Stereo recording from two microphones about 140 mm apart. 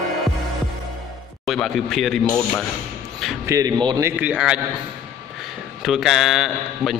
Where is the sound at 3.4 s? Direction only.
25° right (ahead or behind).